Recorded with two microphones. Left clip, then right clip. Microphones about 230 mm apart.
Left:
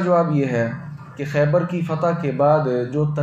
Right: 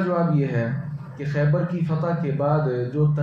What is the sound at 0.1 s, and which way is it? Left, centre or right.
Speech, left.